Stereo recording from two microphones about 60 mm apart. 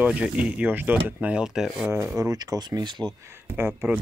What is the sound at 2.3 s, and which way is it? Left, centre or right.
Speech, right.